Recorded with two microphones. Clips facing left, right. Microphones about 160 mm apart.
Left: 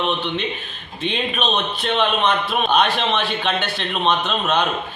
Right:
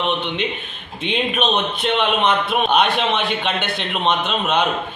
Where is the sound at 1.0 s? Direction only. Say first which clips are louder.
Right 2 dB; 15° right (ahead or behind).